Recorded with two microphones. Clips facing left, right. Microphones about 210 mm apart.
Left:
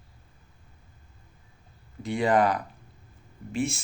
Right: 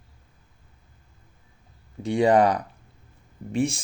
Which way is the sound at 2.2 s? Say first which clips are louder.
Right 4 dB; 35° right (ahead or behind).